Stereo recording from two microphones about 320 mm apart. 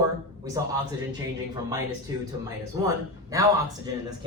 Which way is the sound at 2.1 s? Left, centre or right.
Centre.